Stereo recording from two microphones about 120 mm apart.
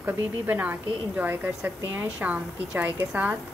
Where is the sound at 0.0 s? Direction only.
15° right (ahead or behind).